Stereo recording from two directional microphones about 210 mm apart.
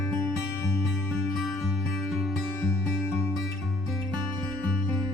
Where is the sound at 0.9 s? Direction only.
Centre (ahead or behind).